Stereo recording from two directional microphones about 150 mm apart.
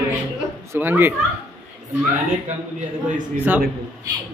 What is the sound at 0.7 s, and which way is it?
Speech, 15° right (ahead or behind).